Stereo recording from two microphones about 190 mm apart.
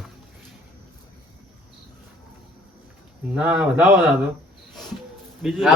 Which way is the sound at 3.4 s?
5° right (ahead or behind).